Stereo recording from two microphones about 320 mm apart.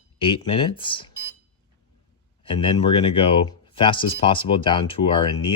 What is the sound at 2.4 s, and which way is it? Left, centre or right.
Speech, centre.